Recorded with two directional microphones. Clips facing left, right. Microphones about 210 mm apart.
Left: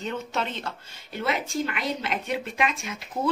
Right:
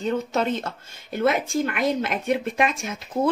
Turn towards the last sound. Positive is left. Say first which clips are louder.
# right 4 dB
turn(degrees=-45)  # may be behind; listen again after turning